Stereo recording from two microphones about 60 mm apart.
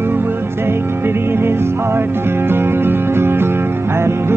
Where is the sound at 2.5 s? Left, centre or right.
Right.